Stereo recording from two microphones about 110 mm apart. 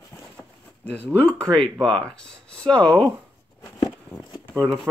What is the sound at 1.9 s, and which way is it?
Speech, 5° left (ahead or behind).